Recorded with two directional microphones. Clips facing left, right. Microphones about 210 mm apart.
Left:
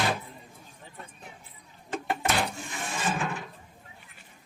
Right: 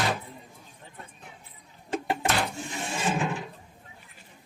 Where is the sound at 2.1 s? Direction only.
Centre (ahead or behind).